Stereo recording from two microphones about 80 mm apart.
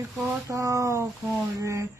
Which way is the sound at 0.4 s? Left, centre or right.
Right.